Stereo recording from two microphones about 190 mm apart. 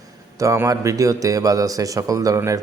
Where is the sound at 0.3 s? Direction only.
15° right (ahead or behind).